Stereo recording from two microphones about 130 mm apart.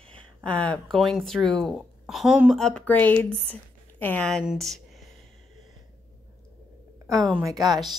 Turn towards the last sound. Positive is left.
turn(degrees=-30)  # may be behind; listen again after turning